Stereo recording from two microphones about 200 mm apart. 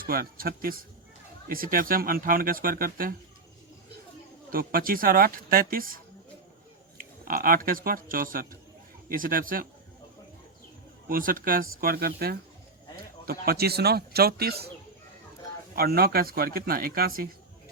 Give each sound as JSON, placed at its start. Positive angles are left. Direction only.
{"t": 0.0, "sound": "speech", "side_deg": -45}
{"t": 4.5, "sound": "speech", "side_deg": -45}
{"t": 7.3, "sound": "speech", "side_deg": -45}
{"t": 11.1, "sound": "speech", "side_deg": -45}
{"t": 15.7, "sound": "speech", "side_deg": -50}